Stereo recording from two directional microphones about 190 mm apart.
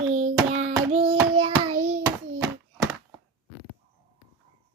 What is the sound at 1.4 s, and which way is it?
Speech, 30° right (ahead or behind).